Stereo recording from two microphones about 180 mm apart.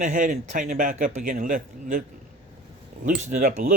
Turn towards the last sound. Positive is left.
turn(degrees=-50)  # may be behind; listen again after turning